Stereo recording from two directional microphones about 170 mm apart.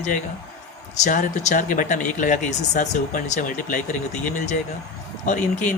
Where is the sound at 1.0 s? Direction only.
45° left (ahead or behind).